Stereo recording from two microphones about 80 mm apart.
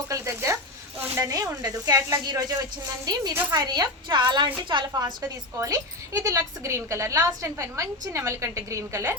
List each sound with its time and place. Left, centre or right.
0.1 s a sound: right
1.1 s a woman's voice: right
5.5 s a woman's voice: right